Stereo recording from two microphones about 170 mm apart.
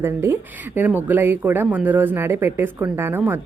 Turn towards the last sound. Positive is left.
turn(degrees=-15)  # may be behind; listen again after turning